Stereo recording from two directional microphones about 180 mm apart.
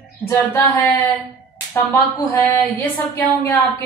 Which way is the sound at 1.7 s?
15° left (ahead or behind).